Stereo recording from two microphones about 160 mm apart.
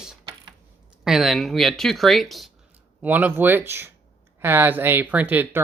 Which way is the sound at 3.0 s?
10° right (ahead or behind).